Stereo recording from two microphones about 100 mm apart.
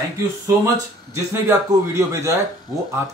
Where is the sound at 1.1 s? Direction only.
30° right (ahead or behind).